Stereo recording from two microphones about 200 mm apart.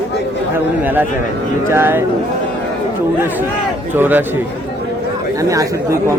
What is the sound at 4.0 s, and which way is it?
Speech, 10° right (ahead or behind).